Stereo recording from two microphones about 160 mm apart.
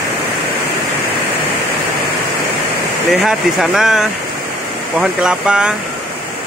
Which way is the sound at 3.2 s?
5° right (ahead or behind).